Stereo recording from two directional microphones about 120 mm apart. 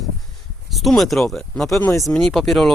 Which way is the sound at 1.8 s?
20° left (ahead or behind).